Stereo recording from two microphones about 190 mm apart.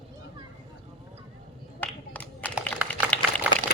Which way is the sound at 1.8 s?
10° left (ahead or behind).